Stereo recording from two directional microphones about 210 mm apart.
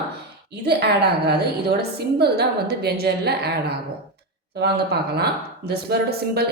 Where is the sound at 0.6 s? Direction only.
50° right (ahead or behind).